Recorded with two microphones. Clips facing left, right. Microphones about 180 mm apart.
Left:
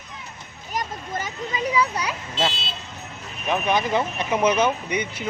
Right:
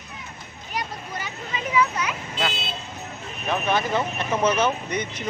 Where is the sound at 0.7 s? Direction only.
45° left (ahead or behind).